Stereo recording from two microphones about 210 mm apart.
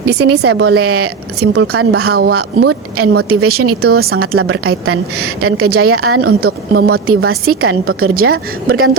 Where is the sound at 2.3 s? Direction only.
90° right.